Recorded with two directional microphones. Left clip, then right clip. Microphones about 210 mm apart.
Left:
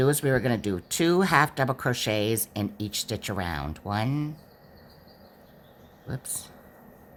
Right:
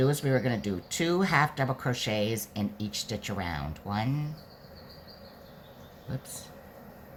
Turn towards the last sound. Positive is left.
turn(degrees=50)  # may be behind; listen again after turning